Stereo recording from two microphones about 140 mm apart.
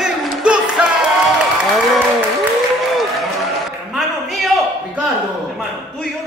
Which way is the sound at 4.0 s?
Centre (ahead or behind).